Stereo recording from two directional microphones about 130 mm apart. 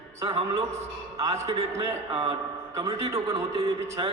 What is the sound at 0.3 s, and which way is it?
Speech, 50° right (ahead or behind).